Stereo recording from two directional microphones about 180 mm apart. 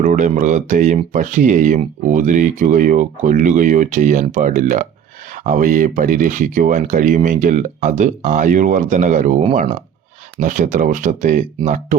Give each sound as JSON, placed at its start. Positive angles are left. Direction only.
{"t": 0.0, "sound": "speech", "side_deg": -45}
{"t": 10.4, "sound": "speech", "side_deg": -45}